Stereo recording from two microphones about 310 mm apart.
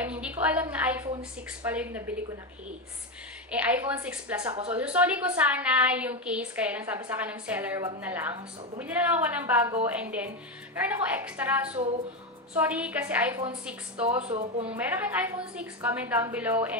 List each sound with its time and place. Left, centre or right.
0.0 s a sound: centre
1.7 s a woman's voice: centre
3.5 s a woman's voice: centre
14.0 s speech: centre
14.7 s a woman's voice: centre